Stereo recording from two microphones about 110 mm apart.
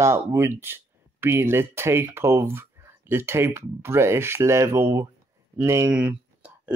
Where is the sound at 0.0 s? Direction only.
25° right (ahead or behind).